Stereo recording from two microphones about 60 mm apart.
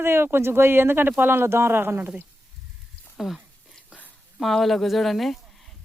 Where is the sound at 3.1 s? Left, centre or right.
Centre.